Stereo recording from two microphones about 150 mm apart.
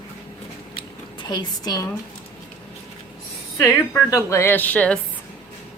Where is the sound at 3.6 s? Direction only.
20° left (ahead or behind).